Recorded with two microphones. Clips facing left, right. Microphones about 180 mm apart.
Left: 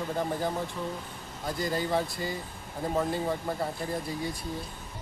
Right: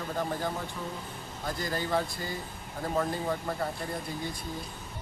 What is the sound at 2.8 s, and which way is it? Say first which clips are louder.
Speech: left 1 dB; 10° left (ahead or behind).